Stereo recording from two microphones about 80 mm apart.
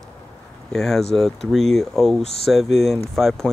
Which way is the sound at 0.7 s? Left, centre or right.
Centre.